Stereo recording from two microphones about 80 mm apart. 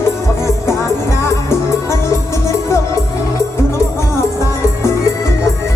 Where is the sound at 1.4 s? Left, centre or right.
Left.